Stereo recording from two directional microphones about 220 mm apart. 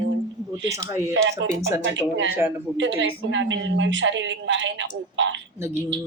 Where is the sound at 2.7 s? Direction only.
55° right (ahead or behind).